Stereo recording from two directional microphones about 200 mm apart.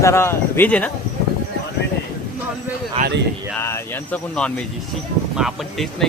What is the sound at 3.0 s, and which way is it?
Speech, 30° right (ahead or behind).